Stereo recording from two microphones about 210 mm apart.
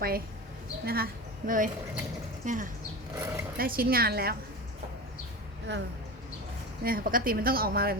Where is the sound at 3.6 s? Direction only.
45° right (ahead or behind).